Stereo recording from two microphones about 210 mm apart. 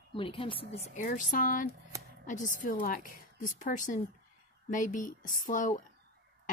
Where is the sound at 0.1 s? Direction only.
25° left (ahead or behind).